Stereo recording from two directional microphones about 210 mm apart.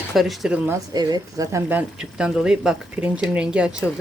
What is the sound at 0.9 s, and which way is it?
Speech, 20° right (ahead or behind).